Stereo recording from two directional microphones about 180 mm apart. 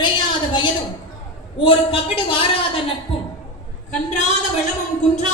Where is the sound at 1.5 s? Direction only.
30° left (ahead or behind).